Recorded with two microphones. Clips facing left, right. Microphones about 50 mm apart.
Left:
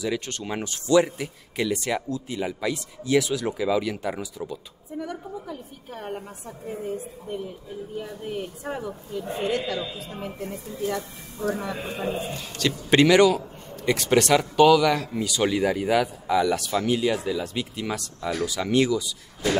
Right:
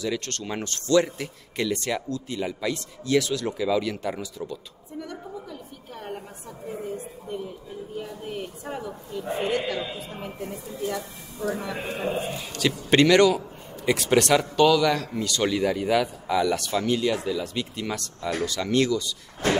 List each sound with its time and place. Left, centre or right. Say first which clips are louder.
0.0 s speech: left 1 dB; centre
8.0 s a man's voice: left 2 dB; centre
9.2 s a man's voice: right 1 dB; centre
9.9 s a man's voice: left 1 dB; centre
11.7 s a man's voice: right 1 dB; centre
19.4 s a sound: even; right